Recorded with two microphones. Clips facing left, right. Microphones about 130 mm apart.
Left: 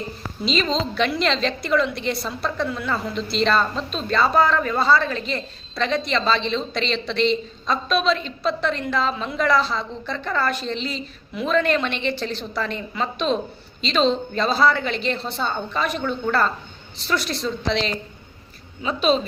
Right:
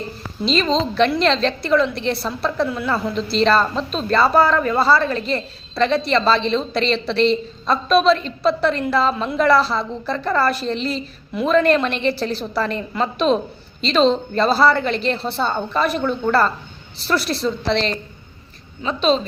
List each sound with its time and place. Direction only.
0.4 s a woman's voice: centre (ahead or behind)